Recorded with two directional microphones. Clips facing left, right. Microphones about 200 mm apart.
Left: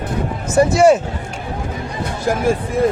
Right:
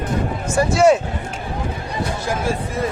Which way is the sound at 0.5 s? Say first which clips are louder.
Left 4 dB; 20° left (ahead or behind).